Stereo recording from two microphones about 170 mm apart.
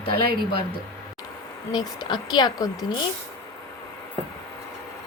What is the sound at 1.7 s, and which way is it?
Speech, 25° left (ahead or behind).